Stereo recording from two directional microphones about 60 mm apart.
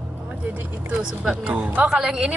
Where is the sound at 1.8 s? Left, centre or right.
Centre.